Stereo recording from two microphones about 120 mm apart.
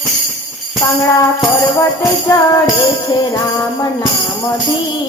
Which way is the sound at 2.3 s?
30° left (ahead or behind).